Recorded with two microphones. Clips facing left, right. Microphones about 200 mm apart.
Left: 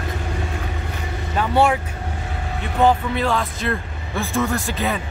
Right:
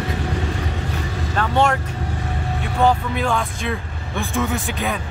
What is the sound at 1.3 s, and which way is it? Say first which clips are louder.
Speech: left 1 dB; 10° left (ahead or behind).